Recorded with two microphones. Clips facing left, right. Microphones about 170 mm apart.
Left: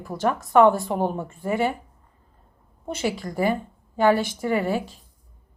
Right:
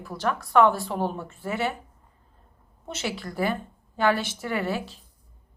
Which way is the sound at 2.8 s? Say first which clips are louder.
Left 5 dB; 15° left (ahead or behind).